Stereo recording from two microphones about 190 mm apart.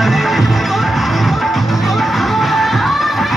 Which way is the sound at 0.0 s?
Centre (ahead or behind).